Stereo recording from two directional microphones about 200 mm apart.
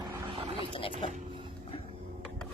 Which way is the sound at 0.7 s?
25° left (ahead or behind).